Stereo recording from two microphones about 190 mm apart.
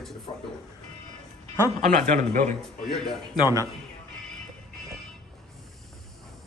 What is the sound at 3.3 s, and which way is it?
Speech, 20° left (ahead or behind).